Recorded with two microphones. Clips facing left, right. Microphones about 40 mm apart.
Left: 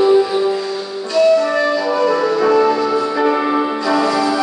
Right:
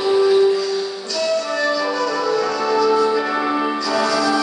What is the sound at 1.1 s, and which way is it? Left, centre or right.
Music, left.